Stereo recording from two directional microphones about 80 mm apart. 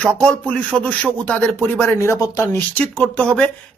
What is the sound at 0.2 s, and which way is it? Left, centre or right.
Speech, centre.